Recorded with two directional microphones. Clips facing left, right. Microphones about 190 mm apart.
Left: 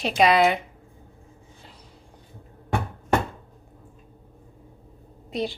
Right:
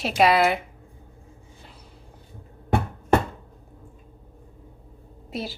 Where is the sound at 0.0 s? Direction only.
5° right (ahead or behind).